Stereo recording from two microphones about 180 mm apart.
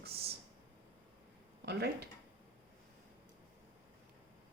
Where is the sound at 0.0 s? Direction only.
60° right (ahead or behind).